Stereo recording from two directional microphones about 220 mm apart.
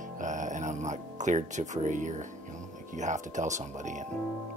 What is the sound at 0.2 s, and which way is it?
Music, 35° right (ahead or behind).